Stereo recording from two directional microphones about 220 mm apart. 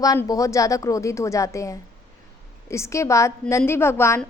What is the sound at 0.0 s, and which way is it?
A woman's voice, 15° left (ahead or behind).